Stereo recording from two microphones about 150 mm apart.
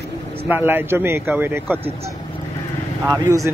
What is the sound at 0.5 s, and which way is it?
A man's voice, 15° right (ahead or behind).